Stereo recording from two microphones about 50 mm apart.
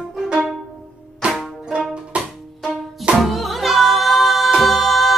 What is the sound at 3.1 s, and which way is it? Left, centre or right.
Music, centre.